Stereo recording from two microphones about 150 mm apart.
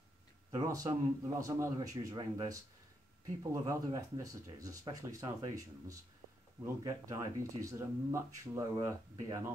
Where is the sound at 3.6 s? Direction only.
25° right (ahead or behind).